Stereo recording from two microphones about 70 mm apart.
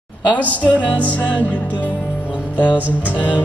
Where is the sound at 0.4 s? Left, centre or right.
Left.